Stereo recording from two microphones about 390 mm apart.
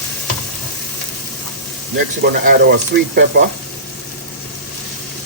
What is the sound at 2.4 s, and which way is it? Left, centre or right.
Speech, right.